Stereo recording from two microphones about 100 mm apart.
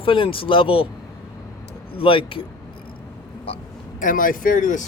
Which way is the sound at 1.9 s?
65° left (ahead or behind).